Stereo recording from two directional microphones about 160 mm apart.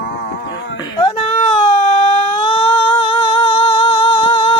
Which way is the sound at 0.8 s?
30° left (ahead or behind).